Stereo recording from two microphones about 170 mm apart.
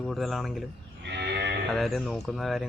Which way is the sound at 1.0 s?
85° right.